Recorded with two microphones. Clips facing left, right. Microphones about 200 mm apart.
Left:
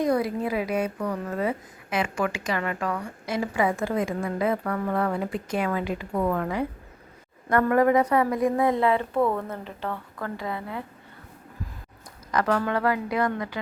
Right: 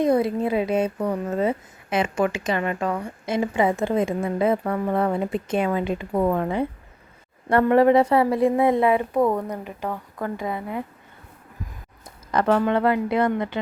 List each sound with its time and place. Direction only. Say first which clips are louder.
0.0 s a woman's voice: right 4 dB; 25° right (ahead or behind)
12.3 s a woman's voice: right 4 dB; 25° right (ahead or behind)